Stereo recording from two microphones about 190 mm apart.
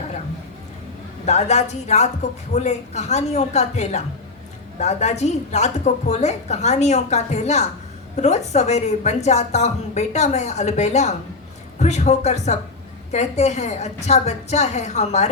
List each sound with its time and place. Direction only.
1.2 s a woman's voice: 35° left (ahead or behind)